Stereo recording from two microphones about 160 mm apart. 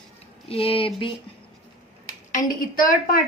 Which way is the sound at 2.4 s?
60° left (ahead or behind).